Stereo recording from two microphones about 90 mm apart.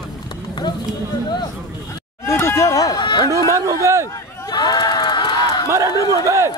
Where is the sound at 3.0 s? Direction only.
60° left (ahead or behind).